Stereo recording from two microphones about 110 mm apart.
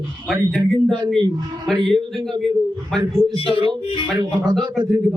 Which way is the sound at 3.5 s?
45° right (ahead or behind).